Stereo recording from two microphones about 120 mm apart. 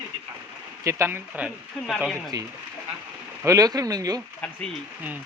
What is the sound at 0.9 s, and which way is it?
Speech, 20° right (ahead or behind).